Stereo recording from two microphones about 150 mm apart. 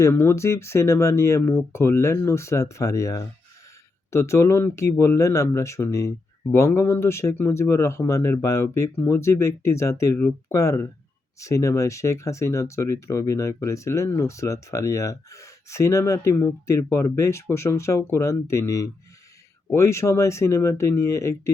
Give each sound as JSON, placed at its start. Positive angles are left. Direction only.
{"t": 0.0, "sound": "speech", "side_deg": 15}